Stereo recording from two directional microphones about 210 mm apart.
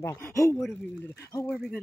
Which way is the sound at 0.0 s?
10° left (ahead or behind).